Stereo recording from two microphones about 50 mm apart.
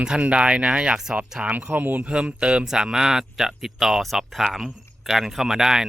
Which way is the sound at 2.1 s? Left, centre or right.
Right.